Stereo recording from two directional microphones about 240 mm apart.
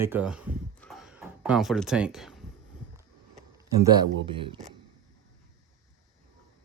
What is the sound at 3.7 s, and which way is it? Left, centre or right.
Speech, centre.